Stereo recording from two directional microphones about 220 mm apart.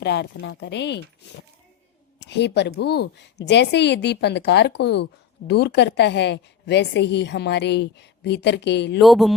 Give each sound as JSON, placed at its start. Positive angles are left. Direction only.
{"t": 0.0, "sound": "a woman's voice", "side_deg": 50}
{"t": 2.1, "sound": "a woman's voice", "side_deg": 50}
{"t": 9.0, "sound": "speech", "side_deg": 0}